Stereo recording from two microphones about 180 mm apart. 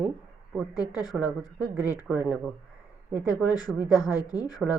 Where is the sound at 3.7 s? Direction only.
20° left (ahead or behind).